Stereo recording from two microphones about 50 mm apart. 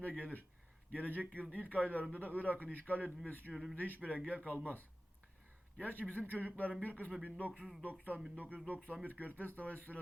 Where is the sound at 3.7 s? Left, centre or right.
Left.